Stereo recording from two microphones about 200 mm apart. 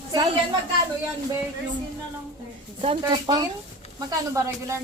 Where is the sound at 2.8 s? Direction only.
30° right (ahead or behind).